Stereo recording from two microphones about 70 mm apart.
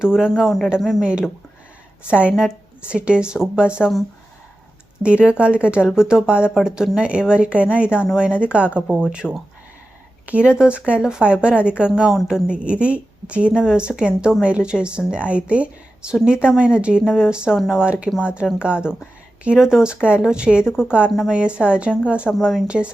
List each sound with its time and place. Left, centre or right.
0.0 s speech: centre
2.0 s speech: centre
5.0 s speech: centre
10.2 s speech: centre
22.3 s speech: centre
22.6 s speech: centre